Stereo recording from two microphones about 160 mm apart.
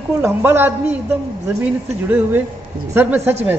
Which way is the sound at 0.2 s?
15° right (ahead or behind).